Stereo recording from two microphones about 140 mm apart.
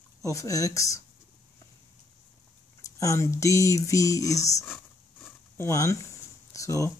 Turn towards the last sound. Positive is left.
turn(degrees=20)  # may be behind; listen again after turning